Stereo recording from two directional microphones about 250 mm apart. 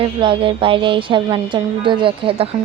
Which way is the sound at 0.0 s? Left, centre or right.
Centre.